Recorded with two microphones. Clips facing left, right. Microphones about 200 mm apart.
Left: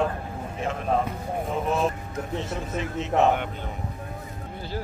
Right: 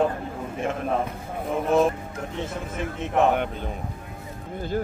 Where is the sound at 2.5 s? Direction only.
55° right (ahead or behind).